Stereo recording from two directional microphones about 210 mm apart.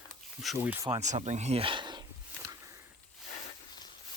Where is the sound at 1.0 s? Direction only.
35° right (ahead or behind); by 2.6 s 20° right (ahead or behind).